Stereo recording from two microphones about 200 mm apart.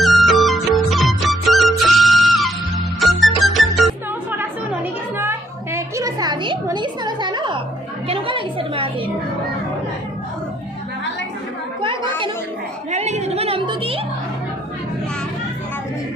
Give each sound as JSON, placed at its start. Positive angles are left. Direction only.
{"t": 0.0, "sound": "music", "side_deg": 0}
{"t": 4.4, "sound": "music", "side_deg": -10}
{"t": 12.9, "sound": "music", "side_deg": -35}